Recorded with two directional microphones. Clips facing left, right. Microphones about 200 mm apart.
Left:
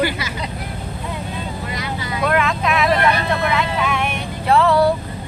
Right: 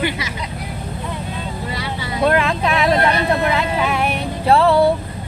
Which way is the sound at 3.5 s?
35° right (ahead or behind).